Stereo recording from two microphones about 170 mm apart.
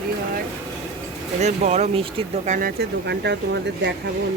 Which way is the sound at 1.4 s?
45° right (ahead or behind).